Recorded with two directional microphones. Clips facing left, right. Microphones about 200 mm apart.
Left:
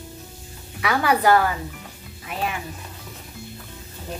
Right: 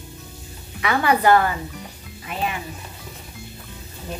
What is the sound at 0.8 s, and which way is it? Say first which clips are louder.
A woman's voice: right 1 dB; 5° left (ahead or behind).